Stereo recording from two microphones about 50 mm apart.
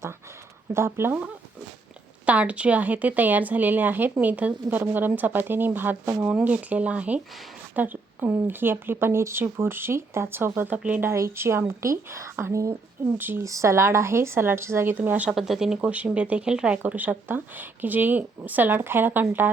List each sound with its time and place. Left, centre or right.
0.7 s a woman's voice: right
2.2 s a woman's voice: right
4.8 s a woman's voice: right
6.1 s speech: right
7.8 s speech: right
11.3 s a woman's voice: right
11.8 s speech: right
13.1 s speech: right
13.4 s a woman's voice: right
14.9 s a woman's voice: right
15.3 s speech: centre
15.8 s speech: right
16.8 s a woman's voice: right